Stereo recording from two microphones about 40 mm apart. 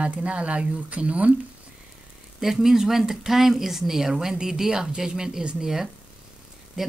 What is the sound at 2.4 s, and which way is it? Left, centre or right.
Speech, centre.